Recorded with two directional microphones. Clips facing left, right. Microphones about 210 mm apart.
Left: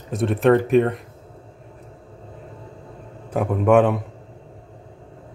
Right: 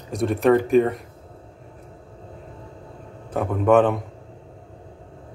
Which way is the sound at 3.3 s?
10° left (ahead or behind).